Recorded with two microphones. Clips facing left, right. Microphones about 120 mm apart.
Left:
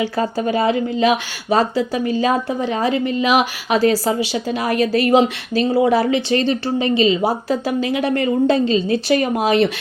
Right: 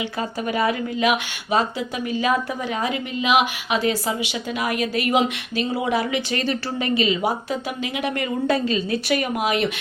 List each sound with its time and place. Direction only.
0.0 s speech: 35° left (ahead or behind)